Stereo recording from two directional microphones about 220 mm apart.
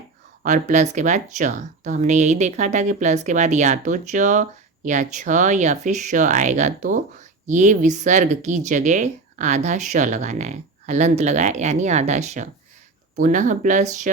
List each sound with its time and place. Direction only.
0.4 s speech: 35° right (ahead or behind)